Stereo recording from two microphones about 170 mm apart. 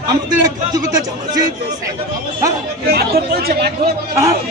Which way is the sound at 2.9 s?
65° right (ahead or behind).